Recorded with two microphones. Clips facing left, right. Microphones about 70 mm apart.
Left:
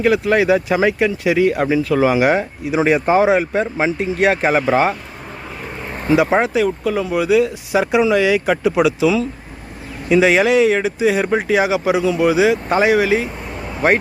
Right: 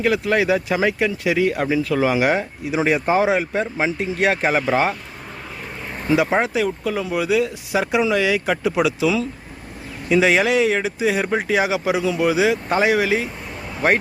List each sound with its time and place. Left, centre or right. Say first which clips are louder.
0.0 s speech: left 4 dB; left
6.4 s speech: left 4 dB; centre